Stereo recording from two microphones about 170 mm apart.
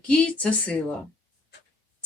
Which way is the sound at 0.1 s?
5° left (ahead or behind).